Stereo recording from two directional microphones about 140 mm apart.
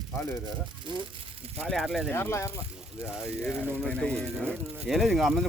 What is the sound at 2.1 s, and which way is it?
Speech, 15° left (ahead or behind).